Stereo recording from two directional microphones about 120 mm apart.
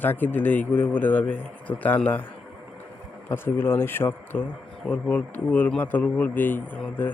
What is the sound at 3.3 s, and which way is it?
A man's voice, 20° left (ahead or behind).